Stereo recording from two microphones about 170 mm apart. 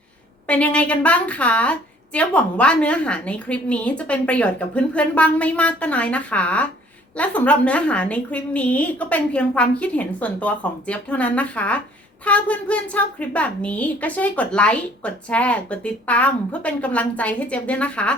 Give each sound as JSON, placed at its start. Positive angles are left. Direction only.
{"t": 0.4, "sound": "a woman's voice", "side_deg": 10}